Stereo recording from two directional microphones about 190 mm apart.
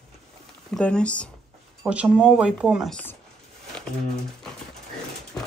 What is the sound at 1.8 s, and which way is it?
Speech, 5° right (ahead or behind).